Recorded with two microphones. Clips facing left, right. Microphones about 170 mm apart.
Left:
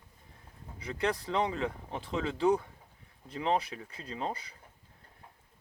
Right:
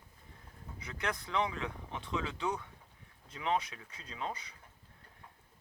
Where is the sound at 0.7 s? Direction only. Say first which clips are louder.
Left 7 dB; 30° left (ahead or behind).